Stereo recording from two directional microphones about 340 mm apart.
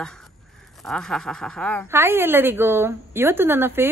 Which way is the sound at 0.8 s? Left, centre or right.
Centre.